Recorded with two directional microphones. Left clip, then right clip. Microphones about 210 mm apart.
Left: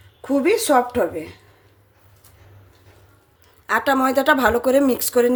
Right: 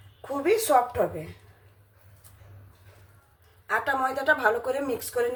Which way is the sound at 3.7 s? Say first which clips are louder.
Left 7 dB; 55° left (ahead or behind).